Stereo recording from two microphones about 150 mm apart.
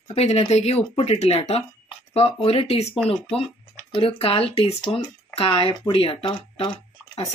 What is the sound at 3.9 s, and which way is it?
Speech, 35° left (ahead or behind).